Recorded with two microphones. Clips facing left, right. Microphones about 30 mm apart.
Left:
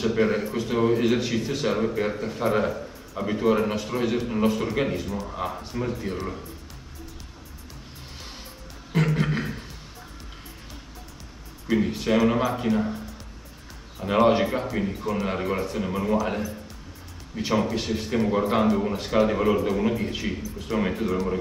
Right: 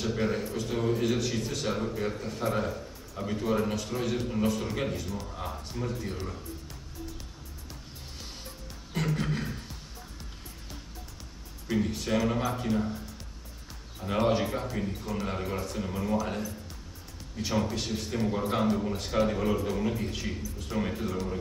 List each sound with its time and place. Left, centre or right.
0.0 s a man's voice: left
1.8 s a man's voice: left
3.7 s a man's voice: left
9.0 s a sound: left
11.7 s a man's voice: left
14.0 s a man's voice: left
17.6 s a man's voice: left
19.2 s a man's voice: left
20.7 s a man's voice: left